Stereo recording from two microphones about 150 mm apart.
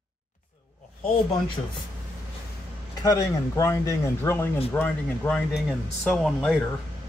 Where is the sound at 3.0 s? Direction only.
20° left (ahead or behind).